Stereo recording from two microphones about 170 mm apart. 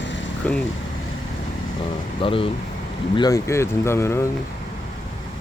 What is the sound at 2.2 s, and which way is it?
Speech, 30° left (ahead or behind).